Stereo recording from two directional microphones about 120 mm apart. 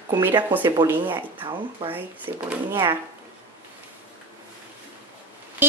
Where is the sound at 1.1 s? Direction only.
40° right (ahead or behind).